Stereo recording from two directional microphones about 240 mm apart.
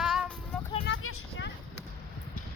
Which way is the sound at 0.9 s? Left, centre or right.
Left.